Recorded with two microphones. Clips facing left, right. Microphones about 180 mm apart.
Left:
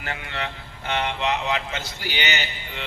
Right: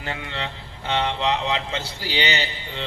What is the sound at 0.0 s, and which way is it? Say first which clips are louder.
Speech: right 1 dB; 25° right (ahead or behind).